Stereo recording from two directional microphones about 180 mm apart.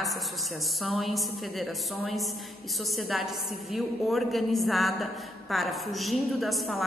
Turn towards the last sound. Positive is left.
turn(degrees=0)  # may be behind; listen again after turning